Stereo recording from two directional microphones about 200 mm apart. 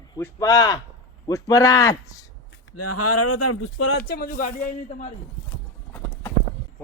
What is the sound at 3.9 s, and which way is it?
Speech, 50° left (ahead or behind).